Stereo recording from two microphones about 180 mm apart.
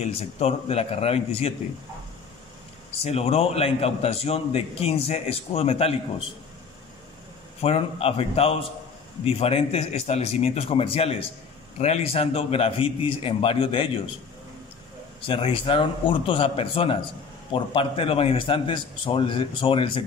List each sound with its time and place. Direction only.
0.1 s a man's voice: 35° left (ahead or behind)
2.9 s a man's voice: 35° left (ahead or behind)
7.6 s a man's voice: 35° left (ahead or behind)
15.2 s a man's voice: 30° left (ahead or behind)